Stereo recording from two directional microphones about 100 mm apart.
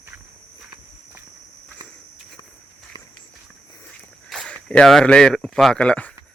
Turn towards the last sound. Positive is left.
turn(degrees=10)  # may be behind; listen again after turning